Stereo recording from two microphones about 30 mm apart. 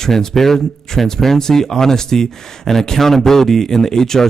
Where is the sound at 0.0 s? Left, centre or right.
Centre.